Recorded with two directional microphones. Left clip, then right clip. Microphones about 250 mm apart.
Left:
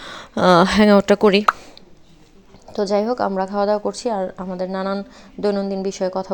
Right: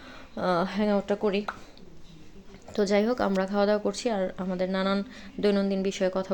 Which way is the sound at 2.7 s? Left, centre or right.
Centre.